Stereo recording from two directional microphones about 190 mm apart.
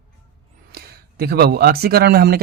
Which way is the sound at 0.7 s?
55° right (ahead or behind).